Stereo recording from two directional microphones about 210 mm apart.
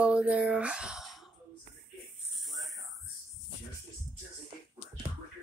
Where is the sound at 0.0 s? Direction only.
5° right (ahead or behind).